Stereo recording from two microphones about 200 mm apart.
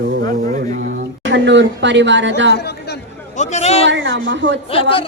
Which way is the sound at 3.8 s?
65° right (ahead or behind).